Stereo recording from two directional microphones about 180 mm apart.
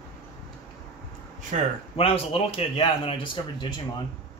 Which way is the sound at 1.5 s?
40° right (ahead or behind).